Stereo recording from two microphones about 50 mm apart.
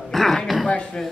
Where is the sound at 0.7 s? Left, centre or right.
Left.